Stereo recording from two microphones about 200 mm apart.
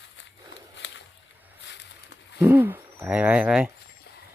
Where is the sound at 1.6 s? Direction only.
60° left (ahead or behind).